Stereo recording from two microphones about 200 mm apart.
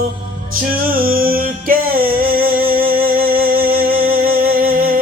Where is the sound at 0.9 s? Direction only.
45° right (ahead or behind).